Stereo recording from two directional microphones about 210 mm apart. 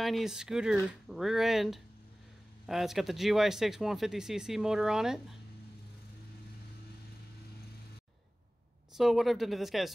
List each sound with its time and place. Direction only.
0.0 s speech: centre (ahead or behind)
8.9 s speech: centre (ahead or behind)